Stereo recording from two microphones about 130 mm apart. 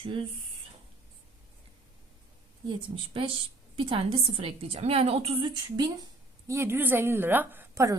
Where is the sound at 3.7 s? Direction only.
40° right (ahead or behind).